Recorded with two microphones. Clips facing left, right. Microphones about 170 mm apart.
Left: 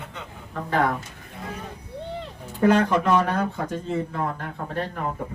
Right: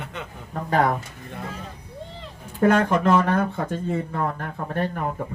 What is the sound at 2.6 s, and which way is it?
Speech, 50° right (ahead or behind).